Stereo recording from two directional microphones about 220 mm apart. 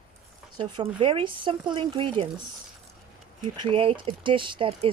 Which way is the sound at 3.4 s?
20° right (ahead or behind).